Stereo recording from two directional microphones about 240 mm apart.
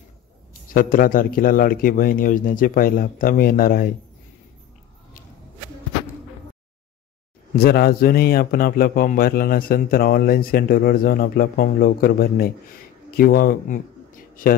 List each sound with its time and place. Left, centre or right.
0.7 s a man's voice: left
7.5 s a man's voice: left